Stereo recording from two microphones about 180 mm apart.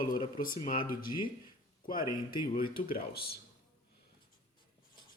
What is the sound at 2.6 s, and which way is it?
Speech, 55° left (ahead or behind).